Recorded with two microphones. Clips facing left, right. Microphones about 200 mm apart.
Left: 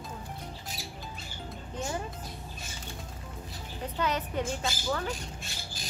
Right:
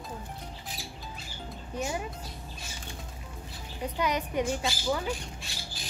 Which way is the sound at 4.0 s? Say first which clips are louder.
Right 2 dB; 15° right (ahead or behind).